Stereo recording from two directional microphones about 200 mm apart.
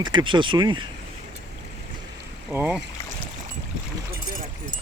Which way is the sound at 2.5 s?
5° right (ahead or behind).